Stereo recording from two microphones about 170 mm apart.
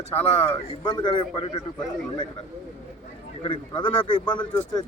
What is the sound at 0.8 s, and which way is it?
Speech, 25° left (ahead or behind).